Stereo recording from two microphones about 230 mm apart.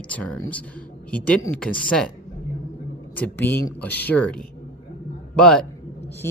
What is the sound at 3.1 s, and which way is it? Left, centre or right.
Speech, centre.